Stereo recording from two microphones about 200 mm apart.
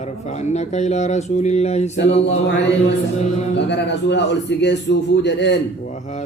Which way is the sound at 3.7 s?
60° left (ahead or behind).